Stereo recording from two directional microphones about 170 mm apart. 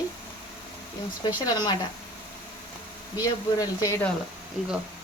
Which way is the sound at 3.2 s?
20° left (ahead or behind).